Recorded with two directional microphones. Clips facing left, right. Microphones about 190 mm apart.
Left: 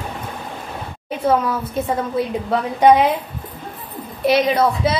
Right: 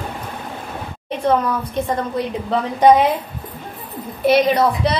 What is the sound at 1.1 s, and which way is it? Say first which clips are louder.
A woman's voice: even; 5° left (ahead or behind).